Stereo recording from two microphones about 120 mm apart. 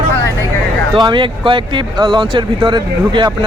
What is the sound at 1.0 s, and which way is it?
Speech, 40° right (ahead or behind).